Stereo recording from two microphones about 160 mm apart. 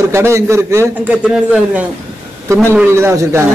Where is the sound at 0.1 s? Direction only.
15° right (ahead or behind).